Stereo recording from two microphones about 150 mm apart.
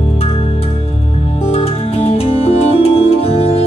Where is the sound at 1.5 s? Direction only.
45° left (ahead or behind).